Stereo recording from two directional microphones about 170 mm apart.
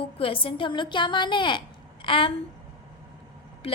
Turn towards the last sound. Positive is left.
turn(degrees=35)  # may be behind; listen again after turning